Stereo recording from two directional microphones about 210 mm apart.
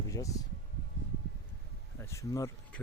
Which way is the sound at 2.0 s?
15° left (ahead or behind).